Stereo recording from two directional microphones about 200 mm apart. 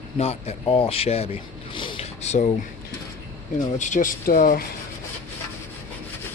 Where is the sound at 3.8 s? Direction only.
40° left (ahead or behind).